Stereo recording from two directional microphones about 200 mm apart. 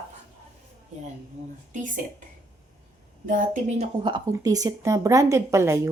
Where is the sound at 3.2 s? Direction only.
40° right (ahead or behind).